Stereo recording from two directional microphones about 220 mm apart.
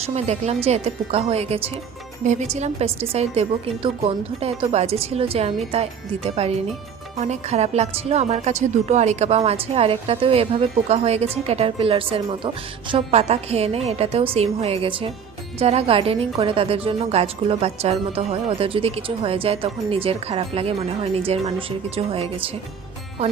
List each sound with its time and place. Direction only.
0.0 s a woman's voice: 30° right (ahead or behind)